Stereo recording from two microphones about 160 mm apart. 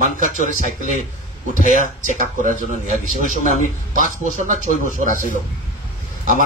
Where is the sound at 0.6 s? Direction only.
50° left (ahead or behind).